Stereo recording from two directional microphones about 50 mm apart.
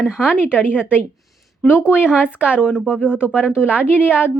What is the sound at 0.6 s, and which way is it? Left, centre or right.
Speech, left.